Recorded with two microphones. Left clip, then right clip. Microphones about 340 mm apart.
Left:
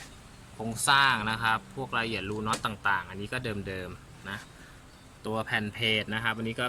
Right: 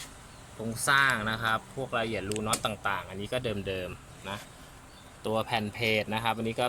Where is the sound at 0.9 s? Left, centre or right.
Centre.